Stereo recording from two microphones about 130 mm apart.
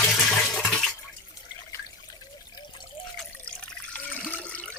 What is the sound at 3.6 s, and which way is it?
Water, 10° left (ahead or behind).